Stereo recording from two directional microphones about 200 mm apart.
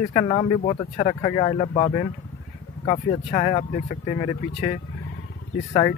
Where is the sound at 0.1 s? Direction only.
25° left (ahead or behind).